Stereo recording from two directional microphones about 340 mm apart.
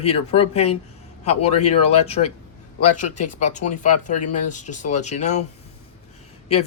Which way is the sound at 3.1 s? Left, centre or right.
Left.